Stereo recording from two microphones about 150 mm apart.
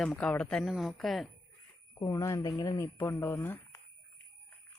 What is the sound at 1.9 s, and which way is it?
Speech, 20° left (ahead or behind).